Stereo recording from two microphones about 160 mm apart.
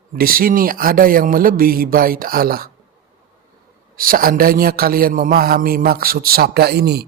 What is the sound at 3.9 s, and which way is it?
A man's voice, 65° right (ahead or behind).